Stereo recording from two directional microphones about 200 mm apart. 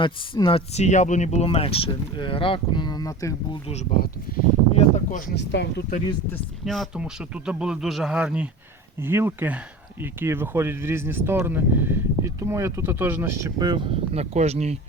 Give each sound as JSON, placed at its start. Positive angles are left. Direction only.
{"t": 0.0, "sound": "speech", "side_deg": 25}
{"t": 4.3, "sound": "speech", "side_deg": 45}
{"t": 5.3, "sound": "speech", "side_deg": 60}
{"t": 6.3, "sound": "speech", "side_deg": 0}